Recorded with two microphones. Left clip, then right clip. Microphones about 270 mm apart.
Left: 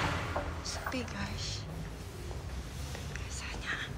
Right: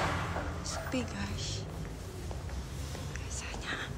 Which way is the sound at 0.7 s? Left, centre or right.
Centre.